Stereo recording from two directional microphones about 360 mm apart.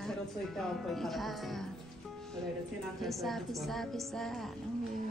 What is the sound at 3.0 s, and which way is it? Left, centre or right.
A woman's voice, centre.